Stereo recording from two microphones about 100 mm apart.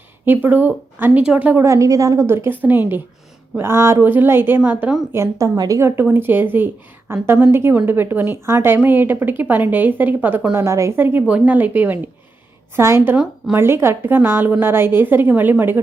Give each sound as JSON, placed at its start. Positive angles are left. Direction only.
{"t": 0.4, "sound": "a woman's voice", "side_deg": -20}
{"t": 1.6, "sound": "a woman's voice", "side_deg": -30}
{"t": 5.1, "sound": "a woman's voice", "side_deg": -30}
{"t": 6.0, "sound": "a woman's voice", "side_deg": -20}